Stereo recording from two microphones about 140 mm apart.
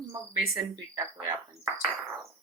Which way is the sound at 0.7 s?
20° right (ahead or behind).